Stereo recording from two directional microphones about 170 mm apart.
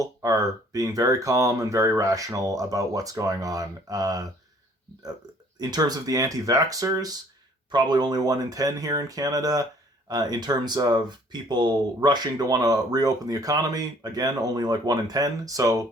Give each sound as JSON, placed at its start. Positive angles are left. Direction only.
{"t": 0.0, "sound": "speech", "side_deg": -20}
{"t": 5.5, "sound": "speech", "side_deg": -25}